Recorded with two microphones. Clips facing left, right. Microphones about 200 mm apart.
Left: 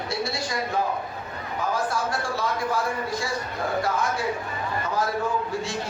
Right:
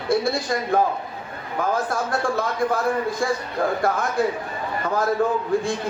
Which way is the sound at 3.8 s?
55° right (ahead or behind).